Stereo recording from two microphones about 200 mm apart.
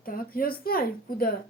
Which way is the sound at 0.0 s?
45° left (ahead or behind).